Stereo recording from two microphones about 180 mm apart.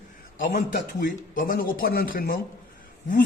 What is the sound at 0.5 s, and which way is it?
Speech, 50° left (ahead or behind).